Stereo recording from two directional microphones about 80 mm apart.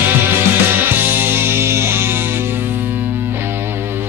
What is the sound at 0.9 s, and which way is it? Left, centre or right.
Music, right.